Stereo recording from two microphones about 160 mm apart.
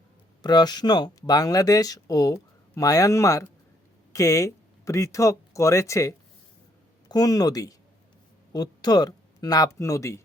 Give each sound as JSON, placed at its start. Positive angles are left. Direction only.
{"t": 0.4, "sound": "speech", "side_deg": 25}